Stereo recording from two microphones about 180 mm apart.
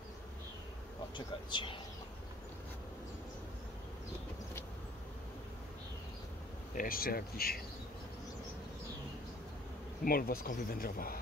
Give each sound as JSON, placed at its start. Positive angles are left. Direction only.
{"t": 1.1, "sound": "speech", "side_deg": 25}
{"t": 6.7, "sound": "speech", "side_deg": 50}
{"t": 10.0, "sound": "speech", "side_deg": 55}